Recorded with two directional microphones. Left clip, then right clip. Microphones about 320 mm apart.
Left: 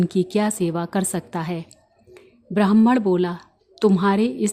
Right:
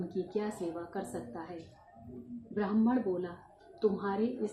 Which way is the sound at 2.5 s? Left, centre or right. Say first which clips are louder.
Left 14 dB; left.